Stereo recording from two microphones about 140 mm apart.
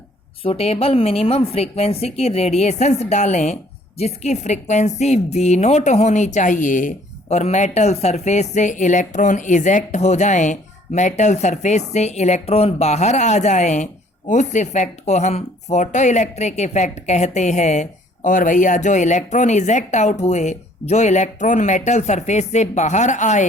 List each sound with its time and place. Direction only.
0.4 s a woman's voice: 45° left (ahead or behind)